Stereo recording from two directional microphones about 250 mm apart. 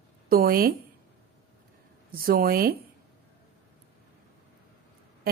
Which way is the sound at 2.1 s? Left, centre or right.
Right.